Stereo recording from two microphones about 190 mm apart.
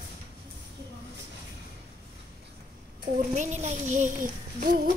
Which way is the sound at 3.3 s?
40° right (ahead or behind).